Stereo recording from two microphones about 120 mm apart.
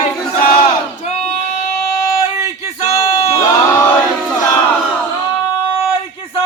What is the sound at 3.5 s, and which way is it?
Crowd, 25° left (ahead or behind).